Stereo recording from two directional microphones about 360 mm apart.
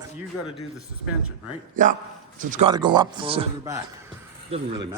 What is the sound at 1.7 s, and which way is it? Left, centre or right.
A man's voice, right.